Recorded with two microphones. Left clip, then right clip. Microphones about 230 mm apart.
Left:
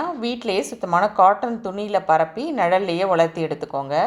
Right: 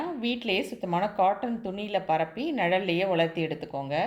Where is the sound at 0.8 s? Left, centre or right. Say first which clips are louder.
Left 12 dB; centre.